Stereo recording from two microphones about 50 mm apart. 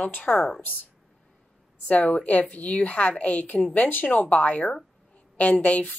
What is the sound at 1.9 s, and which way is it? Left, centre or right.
Speech, left.